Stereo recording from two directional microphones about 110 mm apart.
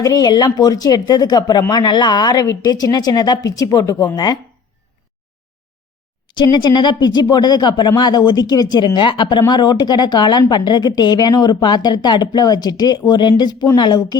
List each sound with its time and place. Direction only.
0.0 s speech: 35° left (ahead or behind)
6.2 s speech: 40° left (ahead or behind)